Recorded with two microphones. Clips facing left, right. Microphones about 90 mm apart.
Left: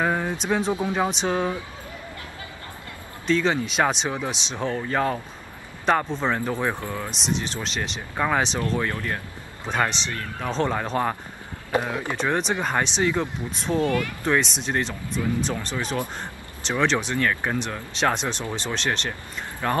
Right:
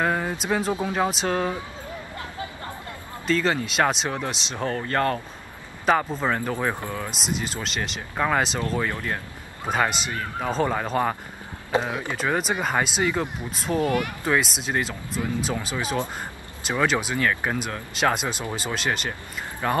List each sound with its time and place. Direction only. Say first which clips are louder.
0.0 s speech: even; centre (ahead or behind)
3.3 s speech: left 1 dB; centre (ahead or behind)
8.7 s speech: even; 15° right (ahead or behind)
11.7 s speech: even; 20° right (ahead or behind)
12.2 s speech: even; 5° right (ahead or behind)
13.7 s speech: even; 20° right (ahead or behind)
14.2 s speech: left 1 dB; 5° right (ahead or behind)